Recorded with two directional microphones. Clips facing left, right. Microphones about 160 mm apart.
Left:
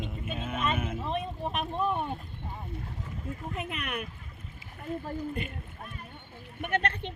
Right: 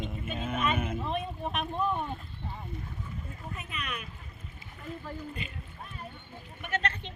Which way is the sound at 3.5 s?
60° left (ahead or behind).